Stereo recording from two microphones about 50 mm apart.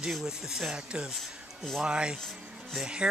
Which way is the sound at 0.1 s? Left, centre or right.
Centre.